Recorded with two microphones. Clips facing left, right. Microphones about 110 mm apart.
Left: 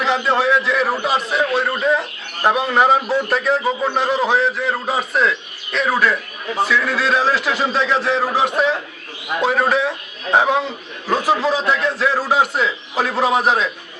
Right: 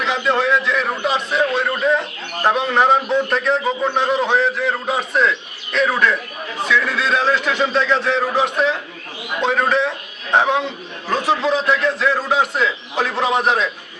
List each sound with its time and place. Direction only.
0.0 s a man's voice: centre (ahead or behind)